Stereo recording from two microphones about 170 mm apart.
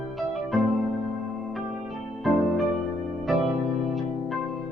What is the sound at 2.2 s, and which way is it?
Music, centre (ahead or behind).